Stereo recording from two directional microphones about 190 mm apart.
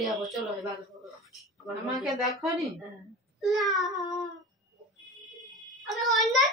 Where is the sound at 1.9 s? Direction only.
Centre (ahead or behind).